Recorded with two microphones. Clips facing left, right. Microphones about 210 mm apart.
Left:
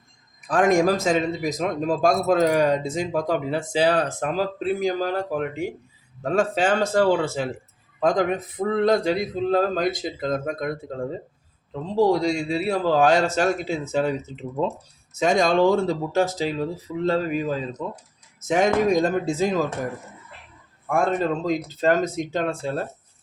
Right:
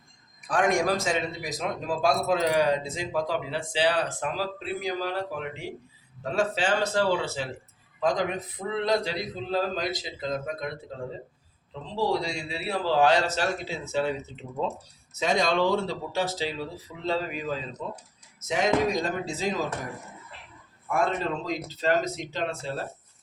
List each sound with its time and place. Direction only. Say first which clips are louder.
0.4 s a man's voice: left 6 dB; 45° left (ahead or behind)
11.7 s a man's voice: left 7 dB; 45° left (ahead or behind)
15.2 s a man's voice: left 6 dB; 50° left (ahead or behind)
20.9 s a man's voice: left 5 dB; 45° left (ahead or behind)